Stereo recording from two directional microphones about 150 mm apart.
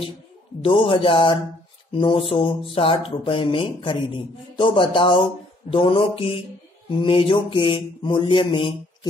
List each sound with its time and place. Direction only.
0.6 s a man's voice: 40° left (ahead or behind)